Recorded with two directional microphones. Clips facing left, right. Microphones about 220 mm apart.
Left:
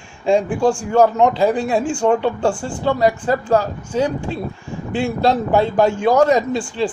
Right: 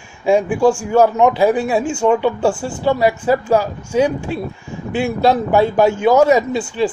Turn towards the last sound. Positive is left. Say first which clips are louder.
# right 2 dB
turn(degrees=-5)  # may be behind; listen again after turning